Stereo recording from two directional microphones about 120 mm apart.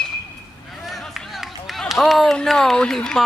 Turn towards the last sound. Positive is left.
turn(degrees=5)  # may be behind; listen again after turning